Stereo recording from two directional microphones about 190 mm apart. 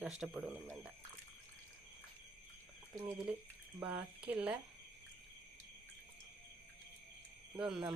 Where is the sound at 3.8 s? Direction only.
5° right (ahead or behind).